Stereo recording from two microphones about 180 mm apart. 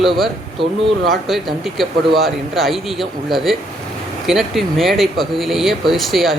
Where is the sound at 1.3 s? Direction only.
Centre (ahead or behind).